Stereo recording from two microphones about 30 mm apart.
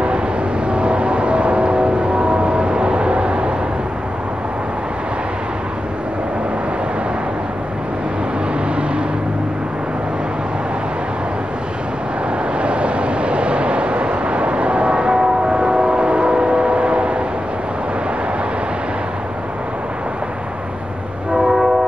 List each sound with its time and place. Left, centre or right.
0.7 s vehicle: right
12.5 s vehicle: right
15.1 s train: right
21.3 s train horn: centre